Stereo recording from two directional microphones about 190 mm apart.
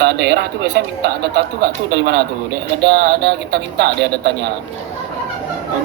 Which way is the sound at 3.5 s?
60° right (ahead or behind).